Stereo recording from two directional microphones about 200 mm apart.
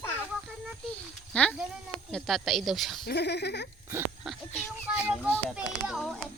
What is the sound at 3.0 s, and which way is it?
Speech, 55° left (ahead or behind).